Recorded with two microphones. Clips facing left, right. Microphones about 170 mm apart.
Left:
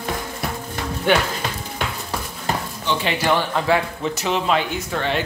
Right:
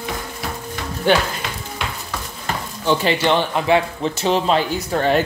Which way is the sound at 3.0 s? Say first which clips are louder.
Even; 25° right (ahead or behind).